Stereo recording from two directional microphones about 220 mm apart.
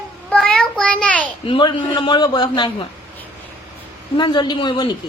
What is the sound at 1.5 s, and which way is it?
Speech, 25° left (ahead or behind).